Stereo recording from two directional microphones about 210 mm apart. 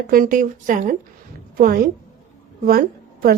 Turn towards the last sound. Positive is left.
turn(degrees=-45)  # may be behind; listen again after turning